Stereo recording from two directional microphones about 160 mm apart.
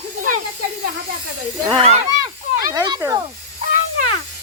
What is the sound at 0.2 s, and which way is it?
Snake, 55° right (ahead or behind).